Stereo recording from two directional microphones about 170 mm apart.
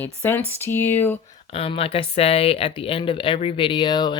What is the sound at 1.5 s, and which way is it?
Speech, 35° left (ahead or behind).